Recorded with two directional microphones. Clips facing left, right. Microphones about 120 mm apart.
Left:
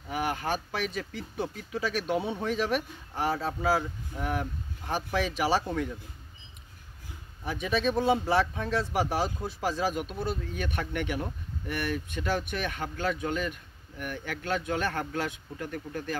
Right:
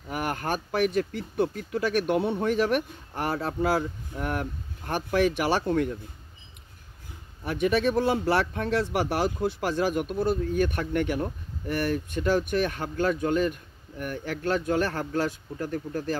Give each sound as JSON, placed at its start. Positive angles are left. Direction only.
{"t": 0.1, "sound": "speech", "side_deg": -50}
{"t": 7.4, "sound": "speech", "side_deg": -60}